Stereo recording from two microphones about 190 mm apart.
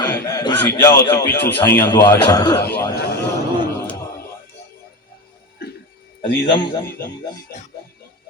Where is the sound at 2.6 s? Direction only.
10° left (ahead or behind).